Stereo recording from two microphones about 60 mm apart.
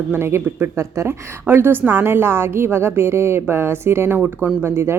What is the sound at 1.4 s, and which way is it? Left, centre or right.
A woman's voice, right.